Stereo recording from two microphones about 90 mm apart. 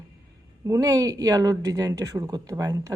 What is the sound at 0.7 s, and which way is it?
Speech, 40° right (ahead or behind).